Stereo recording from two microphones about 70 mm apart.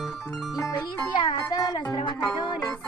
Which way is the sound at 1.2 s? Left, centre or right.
Left.